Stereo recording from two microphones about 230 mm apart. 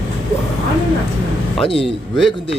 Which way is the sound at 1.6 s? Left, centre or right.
Left.